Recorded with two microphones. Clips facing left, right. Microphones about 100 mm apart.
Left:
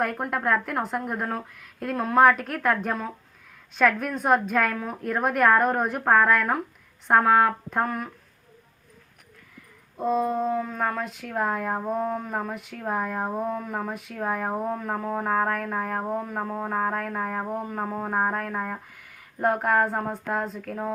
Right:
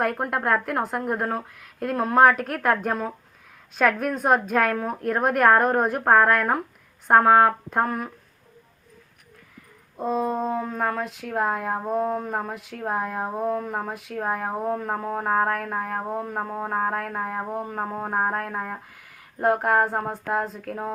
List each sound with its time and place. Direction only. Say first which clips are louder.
0.0 s a woman's voice: right 2 dB; 5° right (ahead or behind)
10.0 s a woman's voice: left 1 dB; centre (ahead or behind)
10.2 s french horn: even; 25° right (ahead or behind)
10.7 s speech: right 2 dB; 10° right (ahead or behind)